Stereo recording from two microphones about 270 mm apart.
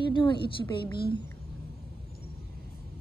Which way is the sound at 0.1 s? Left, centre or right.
Centre.